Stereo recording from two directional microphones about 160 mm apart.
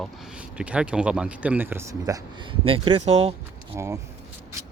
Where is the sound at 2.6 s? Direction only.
35° right (ahead or behind).